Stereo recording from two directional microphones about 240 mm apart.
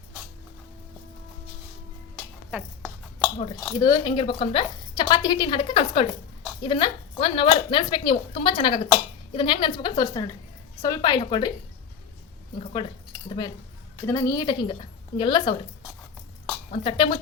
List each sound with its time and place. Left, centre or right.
2.5 s a sound: centre
3.3 s a woman's voice: left
12.5 s speech: left
16.7 s speech: left